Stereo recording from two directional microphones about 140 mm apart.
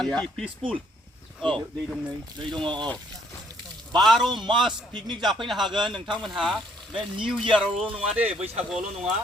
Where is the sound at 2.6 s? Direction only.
35° right (ahead or behind).